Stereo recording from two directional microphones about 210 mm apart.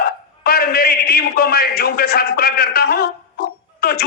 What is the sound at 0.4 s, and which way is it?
A man's voice, 45° left (ahead or behind).